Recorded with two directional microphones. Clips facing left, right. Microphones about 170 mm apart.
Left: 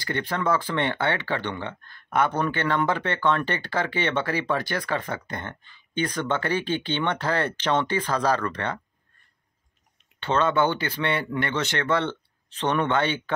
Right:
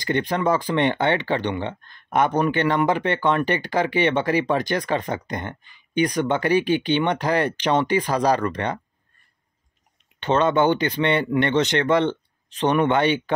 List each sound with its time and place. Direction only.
0.0 s speech: 15° right (ahead or behind)
10.2 s speech: 20° right (ahead or behind)